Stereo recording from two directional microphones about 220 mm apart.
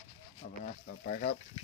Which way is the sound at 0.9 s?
40° left (ahead or behind).